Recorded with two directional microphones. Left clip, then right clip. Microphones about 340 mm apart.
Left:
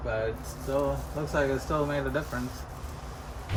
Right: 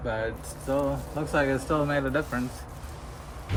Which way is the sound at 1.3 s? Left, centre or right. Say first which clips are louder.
Right 2 dB; right.